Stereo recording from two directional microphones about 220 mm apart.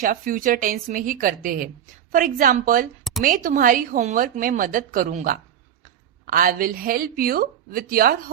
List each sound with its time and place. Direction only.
0.0 s a woman's voice: 40° right (ahead or behind)
3.0 s a sound: centre (ahead or behind)
3.2 s a woman's voice: 35° right (ahead or behind)